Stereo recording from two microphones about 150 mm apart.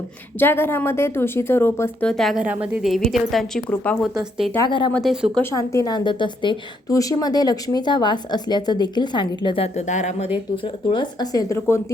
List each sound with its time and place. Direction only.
0.3 s a woman's voice: 15° left (ahead or behind)
2.4 s a woman's voice: 10° right (ahead or behind); by 4.0 s 10° left (ahead or behind)
4.6 s speech: 30° left (ahead or behind)
4.9 s speech: centre (ahead or behind)
5.4 s a woman's voice: 20° left (ahead or behind)
9.7 s speech: 50° left (ahead or behind)
10.2 s a woman's voice: 35° left (ahead or behind); by 11.8 s 20° left (ahead or behind)